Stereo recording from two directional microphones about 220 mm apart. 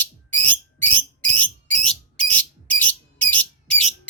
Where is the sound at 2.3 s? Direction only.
5° left (ahead or behind).